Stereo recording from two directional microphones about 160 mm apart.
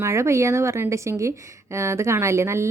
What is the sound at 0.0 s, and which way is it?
A woman's voice, 15° right (ahead or behind).